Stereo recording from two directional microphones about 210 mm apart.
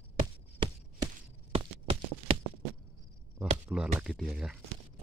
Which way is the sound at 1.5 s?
25° right (ahead or behind).